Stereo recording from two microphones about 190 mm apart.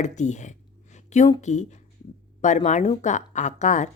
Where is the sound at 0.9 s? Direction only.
40° left (ahead or behind).